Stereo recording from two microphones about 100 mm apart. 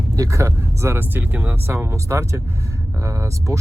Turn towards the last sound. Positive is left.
turn(degrees=-30)  # may be behind; listen again after turning